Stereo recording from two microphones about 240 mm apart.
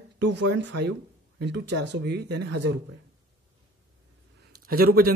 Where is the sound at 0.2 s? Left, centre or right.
Right.